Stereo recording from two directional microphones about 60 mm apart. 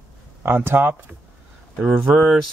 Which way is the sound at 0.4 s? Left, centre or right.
Right.